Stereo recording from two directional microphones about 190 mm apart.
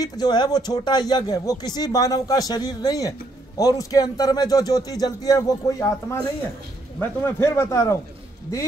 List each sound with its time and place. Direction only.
0.0 s a man's voice: 20° left (ahead or behind)